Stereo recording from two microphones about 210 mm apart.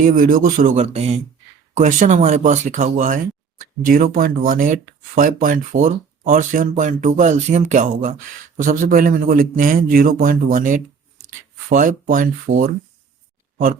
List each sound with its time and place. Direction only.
0.0 s speech: 40° right (ahead or behind)